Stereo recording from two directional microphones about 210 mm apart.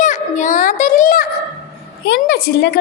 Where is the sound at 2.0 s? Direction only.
55° left (ahead or behind).